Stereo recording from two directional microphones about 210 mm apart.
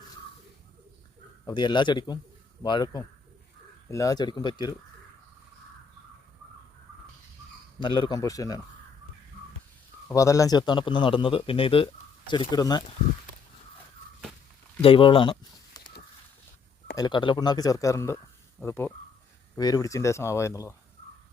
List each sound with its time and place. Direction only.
1.5 s speech: 20° left (ahead or behind)
7.8 s speech: 25° left (ahead or behind)
10.1 s speech: 15° left (ahead or behind)
14.8 s speech: 25° left (ahead or behind)
17.0 s speech: 20° left (ahead or behind)